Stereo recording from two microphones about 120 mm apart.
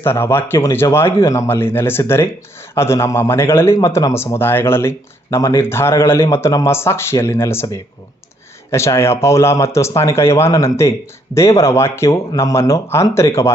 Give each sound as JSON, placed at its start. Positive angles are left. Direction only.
{"t": 0.0, "sound": "a man's voice", "side_deg": 20}